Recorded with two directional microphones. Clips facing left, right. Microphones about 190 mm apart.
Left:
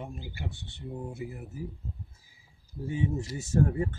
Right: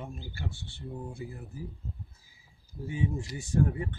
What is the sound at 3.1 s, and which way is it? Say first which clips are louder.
Speech: left 2 dB; 40° left (ahead or behind).